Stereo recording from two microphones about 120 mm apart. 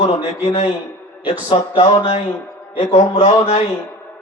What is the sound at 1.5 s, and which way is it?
Speech, 45° left (ahead or behind).